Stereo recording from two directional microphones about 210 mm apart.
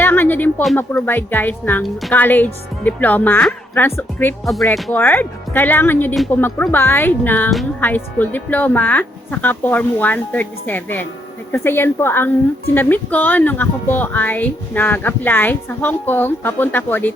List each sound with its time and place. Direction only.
0.0 s speech: 10° left (ahead or behind)